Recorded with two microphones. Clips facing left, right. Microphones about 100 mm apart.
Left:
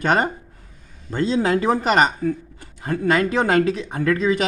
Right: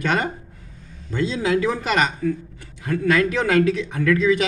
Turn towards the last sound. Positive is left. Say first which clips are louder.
# right 1 dB
turn(degrees=35)  # may be behind; listen again after turning